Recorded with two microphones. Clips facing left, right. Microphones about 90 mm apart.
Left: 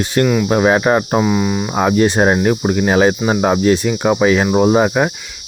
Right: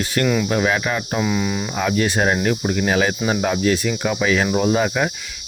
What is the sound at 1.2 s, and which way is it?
Speech, 20° left (ahead or behind).